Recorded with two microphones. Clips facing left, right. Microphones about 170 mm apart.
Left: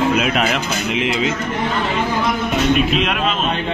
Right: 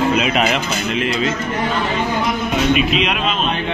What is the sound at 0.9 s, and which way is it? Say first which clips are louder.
Speech: even; 15° left (ahead or behind).